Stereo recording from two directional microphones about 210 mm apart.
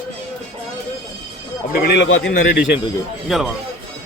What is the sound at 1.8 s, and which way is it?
Speech, 55° left (ahead or behind).